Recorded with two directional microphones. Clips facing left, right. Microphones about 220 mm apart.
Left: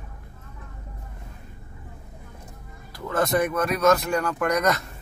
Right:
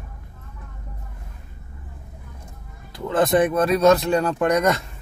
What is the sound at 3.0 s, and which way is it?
Speech, 30° right (ahead or behind).